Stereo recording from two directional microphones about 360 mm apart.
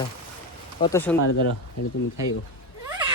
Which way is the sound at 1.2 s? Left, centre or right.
Left.